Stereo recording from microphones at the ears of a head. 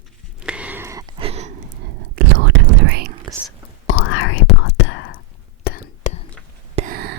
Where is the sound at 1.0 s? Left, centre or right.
Right.